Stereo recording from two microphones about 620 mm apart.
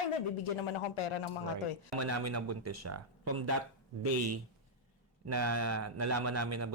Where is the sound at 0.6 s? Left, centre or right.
Left.